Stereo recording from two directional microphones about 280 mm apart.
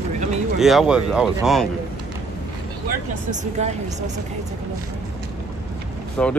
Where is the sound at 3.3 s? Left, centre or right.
Right.